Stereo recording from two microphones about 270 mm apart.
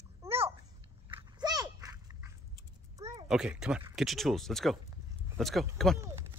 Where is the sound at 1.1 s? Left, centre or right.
Centre.